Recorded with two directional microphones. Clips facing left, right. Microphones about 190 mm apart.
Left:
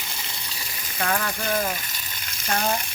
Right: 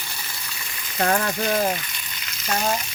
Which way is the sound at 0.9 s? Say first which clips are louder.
Right 5 dB; 40° right (ahead or behind).